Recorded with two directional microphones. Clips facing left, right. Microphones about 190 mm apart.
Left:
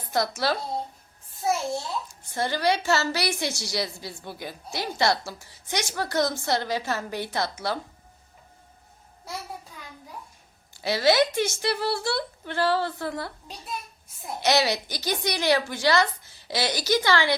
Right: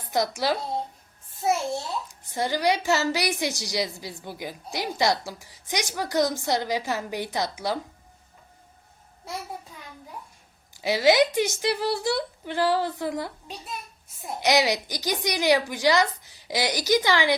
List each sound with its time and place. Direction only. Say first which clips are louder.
0.1 s a woman's voice: right 1 dB; 15° right (ahead or behind)
2.3 s a woman's voice: right 1 dB; 15° right (ahead or behind)
10.8 s a woman's voice: right 2 dB; 15° right (ahead or behind)
14.4 s a woman's voice: right 1 dB; 15° right (ahead or behind)